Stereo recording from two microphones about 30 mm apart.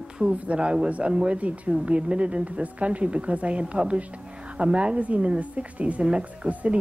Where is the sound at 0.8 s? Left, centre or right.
Right.